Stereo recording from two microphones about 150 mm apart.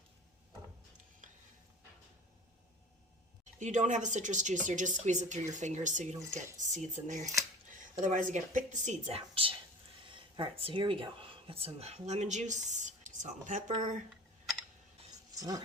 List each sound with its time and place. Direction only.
1.2 s stir: 60° right (ahead or behind)
3.6 s a woman's voice: 55° right (ahead or behind)
15.4 s speech: 25° right (ahead or behind)